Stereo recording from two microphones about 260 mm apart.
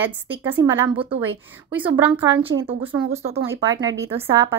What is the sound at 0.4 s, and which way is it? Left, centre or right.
Speech, centre.